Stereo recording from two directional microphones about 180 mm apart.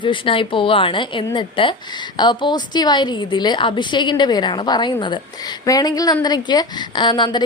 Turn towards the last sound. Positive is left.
turn(degrees=25)  # may be behind; listen again after turning